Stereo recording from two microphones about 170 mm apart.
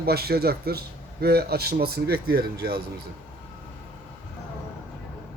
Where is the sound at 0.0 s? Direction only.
65° right (ahead or behind).